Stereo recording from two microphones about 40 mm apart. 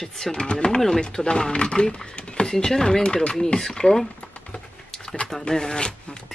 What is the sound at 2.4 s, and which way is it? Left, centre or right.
Speech, centre.